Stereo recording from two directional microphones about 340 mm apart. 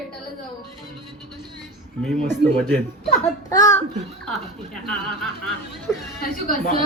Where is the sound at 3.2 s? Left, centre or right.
Centre.